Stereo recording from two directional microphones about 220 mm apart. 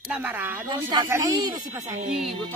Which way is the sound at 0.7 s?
20° right (ahead or behind).